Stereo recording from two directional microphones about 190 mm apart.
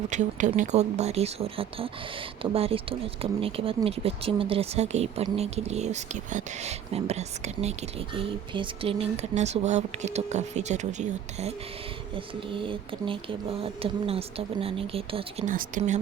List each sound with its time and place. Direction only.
0.1 s speech: 40° right (ahead or behind)
12.1 s speech: 25° right (ahead or behind)
15.4 s speech: 45° right (ahead or behind)